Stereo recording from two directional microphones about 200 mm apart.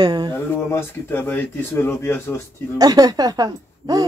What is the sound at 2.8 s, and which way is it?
A woman's voice, 20° right (ahead or behind).